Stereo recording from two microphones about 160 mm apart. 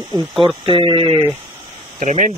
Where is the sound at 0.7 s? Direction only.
35° right (ahead or behind).